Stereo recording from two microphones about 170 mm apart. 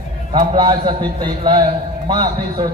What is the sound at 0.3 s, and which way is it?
A man's voice, 25° right (ahead or behind).